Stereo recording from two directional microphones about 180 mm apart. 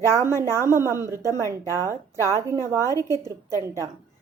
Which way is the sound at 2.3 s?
15° right (ahead or behind).